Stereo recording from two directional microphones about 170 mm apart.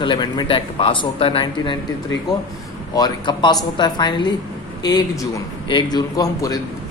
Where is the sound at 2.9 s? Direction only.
25° left (ahead or behind).